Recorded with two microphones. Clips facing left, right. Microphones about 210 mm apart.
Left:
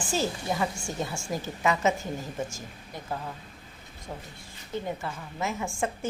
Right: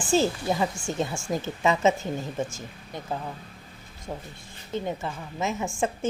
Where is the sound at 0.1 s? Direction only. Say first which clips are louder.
Right 6 dB; 25° right (ahead or behind).